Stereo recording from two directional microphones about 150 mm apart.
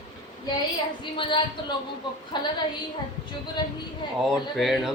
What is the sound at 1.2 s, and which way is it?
Speech, 35° left (ahead or behind).